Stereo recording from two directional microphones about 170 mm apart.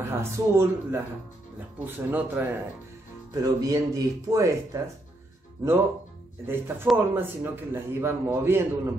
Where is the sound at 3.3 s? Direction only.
20° right (ahead or behind).